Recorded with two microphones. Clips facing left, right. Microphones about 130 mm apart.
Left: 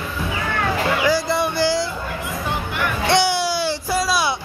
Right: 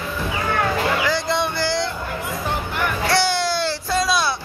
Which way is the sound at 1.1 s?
10° left (ahead or behind).